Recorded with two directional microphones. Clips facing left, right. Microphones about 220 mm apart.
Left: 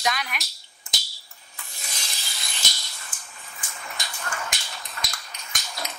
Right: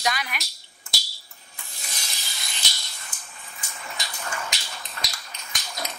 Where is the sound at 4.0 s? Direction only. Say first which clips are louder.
Even; 50° left (ahead or behind).